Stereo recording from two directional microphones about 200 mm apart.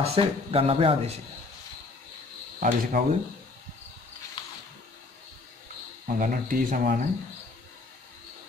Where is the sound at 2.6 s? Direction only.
45° right (ahead or behind).